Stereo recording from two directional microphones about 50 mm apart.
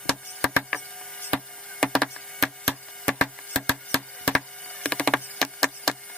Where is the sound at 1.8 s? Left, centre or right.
Centre.